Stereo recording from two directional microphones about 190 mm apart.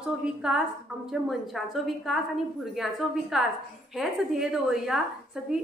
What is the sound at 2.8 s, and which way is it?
A woman's voice, centre (ahead or behind).